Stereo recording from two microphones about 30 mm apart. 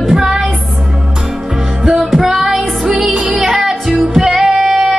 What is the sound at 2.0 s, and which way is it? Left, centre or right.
Music, centre.